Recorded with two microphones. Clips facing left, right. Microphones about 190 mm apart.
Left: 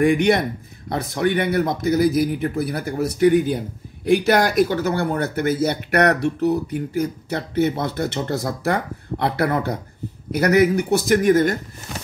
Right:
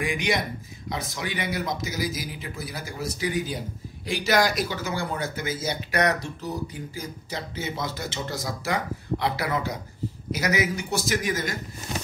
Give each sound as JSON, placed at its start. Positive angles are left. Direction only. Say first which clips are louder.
{"t": 0.0, "sound": "speech", "louder": "left 10 dB", "side_deg": 60}